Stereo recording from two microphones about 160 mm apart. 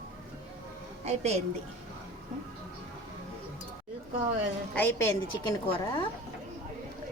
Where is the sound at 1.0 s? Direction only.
40° right (ahead or behind).